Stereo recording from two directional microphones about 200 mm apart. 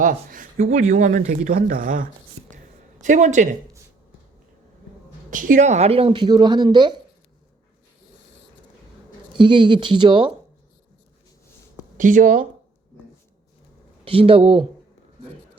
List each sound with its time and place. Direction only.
0.0 s speech: 40° right (ahead or behind)
5.3 s speech: 40° right (ahead or behind); by 7.0 s 20° right (ahead or behind)
9.4 s speech: 25° right (ahead or behind)
11.9 s speech: 40° right (ahead or behind)
14.0 s speech: 30° right (ahead or behind)